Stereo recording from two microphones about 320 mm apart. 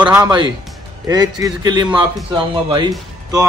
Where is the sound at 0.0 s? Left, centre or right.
Centre.